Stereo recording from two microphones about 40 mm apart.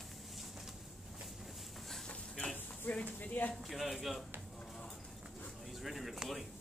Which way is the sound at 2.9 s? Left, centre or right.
Left.